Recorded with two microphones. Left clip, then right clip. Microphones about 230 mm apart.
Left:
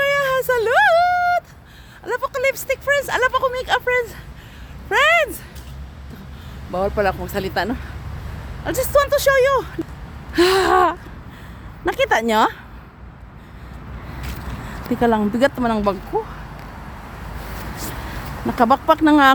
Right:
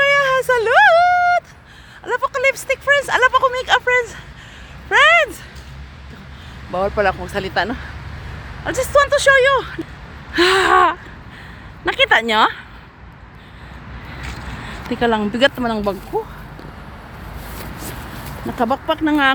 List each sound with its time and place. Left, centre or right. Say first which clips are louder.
0.0 s a sound: right 4 dB; centre
6.7 s speech: right 2 dB; centre
10.3 s gasp: right 2 dB; centre
11.9 s speech: right 3 dB; centre
14.8 s speech: even; centre
18.5 s speech: left 4 dB; centre